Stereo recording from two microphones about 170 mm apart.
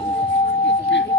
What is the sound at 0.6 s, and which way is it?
Singing bowl, 90° left.